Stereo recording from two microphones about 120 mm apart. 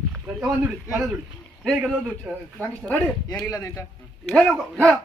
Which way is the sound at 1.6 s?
5° left (ahead or behind).